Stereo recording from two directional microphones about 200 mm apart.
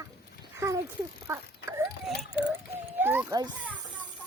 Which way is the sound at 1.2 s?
15° right (ahead or behind).